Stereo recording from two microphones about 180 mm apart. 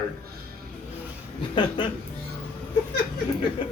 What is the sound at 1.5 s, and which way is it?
Speech, 25° left (ahead or behind).